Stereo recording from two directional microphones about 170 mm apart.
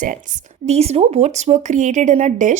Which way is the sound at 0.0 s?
50° right (ahead or behind).